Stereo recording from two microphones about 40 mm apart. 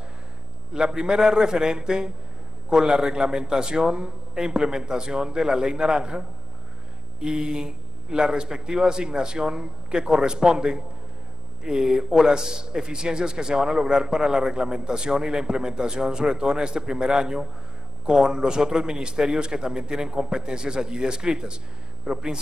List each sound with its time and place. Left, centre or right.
0.7 s a man's voice: centre